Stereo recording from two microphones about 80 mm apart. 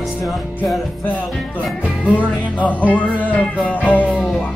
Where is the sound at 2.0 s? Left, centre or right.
Centre.